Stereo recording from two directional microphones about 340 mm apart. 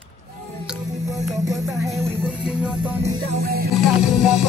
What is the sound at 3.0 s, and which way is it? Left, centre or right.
Music, right.